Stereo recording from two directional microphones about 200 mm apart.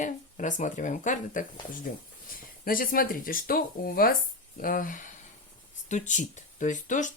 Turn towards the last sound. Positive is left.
turn(degrees=40)  # may be behind; listen again after turning